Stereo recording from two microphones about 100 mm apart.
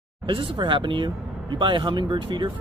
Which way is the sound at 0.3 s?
55° right (ahead or behind).